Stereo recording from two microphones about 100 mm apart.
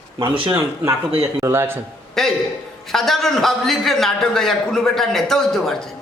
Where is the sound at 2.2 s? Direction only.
5° left (ahead or behind).